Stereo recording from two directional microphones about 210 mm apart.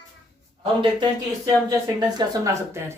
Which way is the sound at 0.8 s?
20° right (ahead or behind).